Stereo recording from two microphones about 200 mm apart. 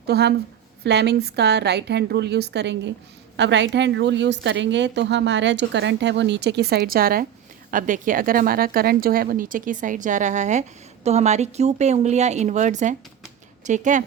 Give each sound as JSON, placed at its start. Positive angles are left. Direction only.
{"t": 0.1, "sound": "a woman's voice", "side_deg": -55}